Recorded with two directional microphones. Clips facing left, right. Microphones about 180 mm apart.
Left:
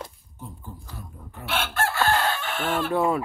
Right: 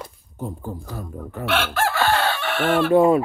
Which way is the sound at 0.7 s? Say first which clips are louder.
Right 10 dB; 50° right (ahead or behind).